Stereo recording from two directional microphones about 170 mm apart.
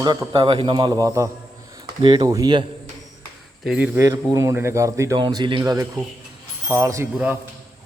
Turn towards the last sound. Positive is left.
turn(degrees=-15)  # may be behind; listen again after turning